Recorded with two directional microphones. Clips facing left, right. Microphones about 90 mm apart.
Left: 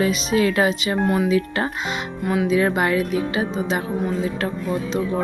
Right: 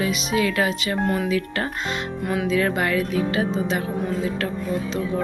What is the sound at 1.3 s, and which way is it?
Speech, 25° left (ahead or behind).